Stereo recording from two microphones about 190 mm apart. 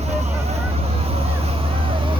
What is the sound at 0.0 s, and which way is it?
Vehicle, 35° right (ahead or behind).